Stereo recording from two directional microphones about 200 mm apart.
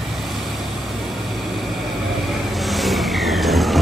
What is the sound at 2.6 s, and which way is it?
Vehicle, centre (ahead or behind).